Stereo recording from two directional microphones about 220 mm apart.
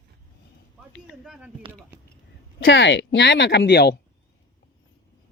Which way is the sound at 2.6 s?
55° left (ahead or behind).